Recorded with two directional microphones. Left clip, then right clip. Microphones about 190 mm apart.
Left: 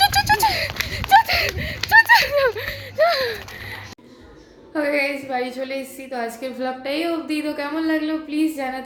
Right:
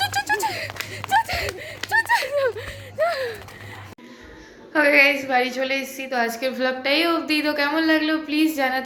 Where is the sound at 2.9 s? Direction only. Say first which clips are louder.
Left 5 dB; 30° left (ahead or behind).